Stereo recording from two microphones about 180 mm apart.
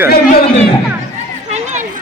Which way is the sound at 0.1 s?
60° left (ahead or behind).